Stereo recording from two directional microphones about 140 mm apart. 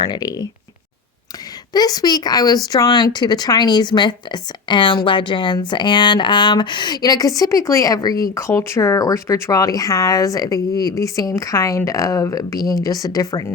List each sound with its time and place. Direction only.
0.0 s speech: 30° left (ahead or behind)
1.7 s speech: 30° left (ahead or behind)